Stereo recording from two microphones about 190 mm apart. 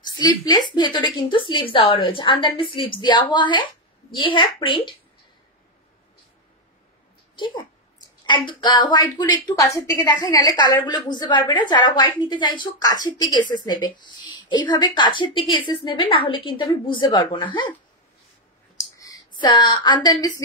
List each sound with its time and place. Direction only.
0.0 s a woman's voice: 20° left (ahead or behind)
7.3 s a woman's voice: 25° left (ahead or behind)
18.9 s a woman's voice: 20° left (ahead or behind)